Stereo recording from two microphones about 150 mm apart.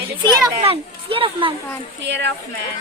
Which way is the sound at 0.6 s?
40° right (ahead or behind).